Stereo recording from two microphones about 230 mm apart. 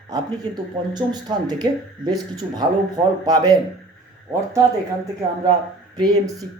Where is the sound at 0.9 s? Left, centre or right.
Centre.